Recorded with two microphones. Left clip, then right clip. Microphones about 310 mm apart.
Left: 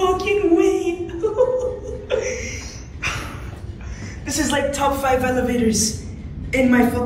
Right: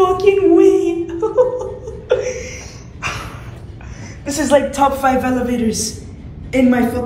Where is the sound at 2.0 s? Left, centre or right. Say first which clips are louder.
Right 5 dB; centre.